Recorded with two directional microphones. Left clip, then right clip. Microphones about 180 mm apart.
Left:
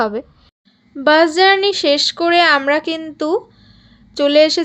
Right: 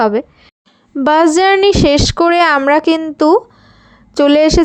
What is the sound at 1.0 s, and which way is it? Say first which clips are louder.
Speech: right 1 dB; 55° right (ahead or behind).